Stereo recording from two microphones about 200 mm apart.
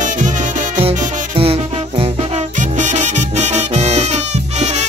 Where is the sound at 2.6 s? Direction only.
35° right (ahead or behind).